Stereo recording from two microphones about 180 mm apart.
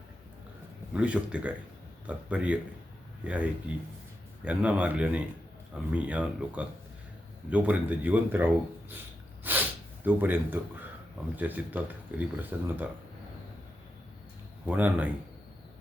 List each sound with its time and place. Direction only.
0.9 s speech: 5° right (ahead or behind)
9.4 s snort: 10° right (ahead or behind)
11.3 s speech: 10° right (ahead or behind)
14.7 s speech: 10° right (ahead or behind)